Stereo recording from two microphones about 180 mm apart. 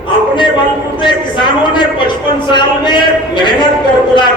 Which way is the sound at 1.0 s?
25° left (ahead or behind).